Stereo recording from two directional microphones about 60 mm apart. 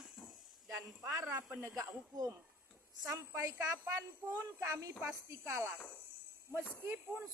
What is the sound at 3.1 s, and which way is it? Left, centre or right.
A woman's voice, right.